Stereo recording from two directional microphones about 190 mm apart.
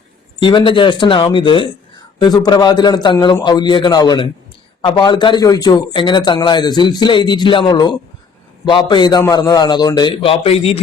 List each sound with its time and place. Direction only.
0.3 s speech: 25° left (ahead or behind)